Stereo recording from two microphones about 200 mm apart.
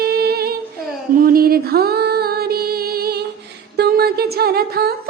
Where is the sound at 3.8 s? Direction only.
50° right (ahead or behind).